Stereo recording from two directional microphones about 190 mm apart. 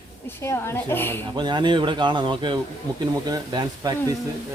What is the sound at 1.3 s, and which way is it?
Speech, 25° right (ahead or behind).